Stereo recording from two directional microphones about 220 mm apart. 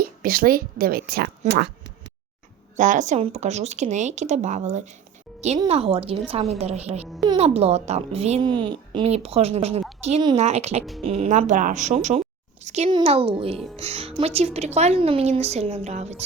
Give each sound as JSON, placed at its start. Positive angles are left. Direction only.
{"t": 0.0, "sound": "a woman's voice", "side_deg": -40}
{"t": 2.7, "sound": "speech", "side_deg": -35}